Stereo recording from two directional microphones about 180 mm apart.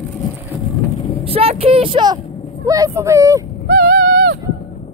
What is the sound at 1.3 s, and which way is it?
Speech, 30° right (ahead or behind).